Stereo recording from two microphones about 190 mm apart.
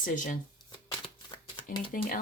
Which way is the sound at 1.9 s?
50° left (ahead or behind).